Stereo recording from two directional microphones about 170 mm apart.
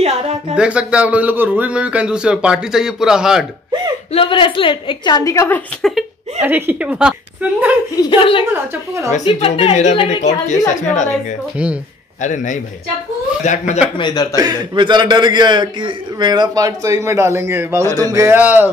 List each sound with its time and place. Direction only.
0.0 s speech: 40° right (ahead or behind)
0.6 s a man's voice: 5° right (ahead or behind)
4.1 s a woman's voice: 30° left (ahead or behind)
5.8 s speech: centre (ahead or behind)
6.4 s a man's voice: 10° right (ahead or behind)
7.9 s a woman's voice: 25° left (ahead or behind)
9.5 s a woman's voice: 40° left (ahead or behind)
11.5 s a man's voice: 5° right (ahead or behind)
12.2 s a woman's voice: 45° left (ahead or behind)
13.9 s a woman's voice: 25° left (ahead or behind)
14.3 s a man's voice: 25° right (ahead or behind)